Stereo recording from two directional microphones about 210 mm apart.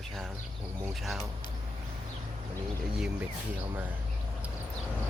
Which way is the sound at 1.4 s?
20° left (ahead or behind).